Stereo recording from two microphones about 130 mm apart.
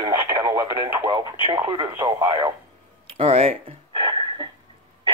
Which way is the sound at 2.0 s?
25° right (ahead or behind).